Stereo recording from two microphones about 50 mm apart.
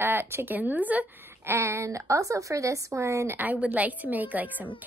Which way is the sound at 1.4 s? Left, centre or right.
Right.